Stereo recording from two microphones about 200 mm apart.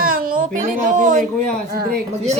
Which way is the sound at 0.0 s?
45° right (ahead or behind).